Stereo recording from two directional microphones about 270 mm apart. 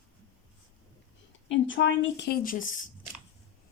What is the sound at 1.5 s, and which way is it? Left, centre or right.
A woman's voice, left.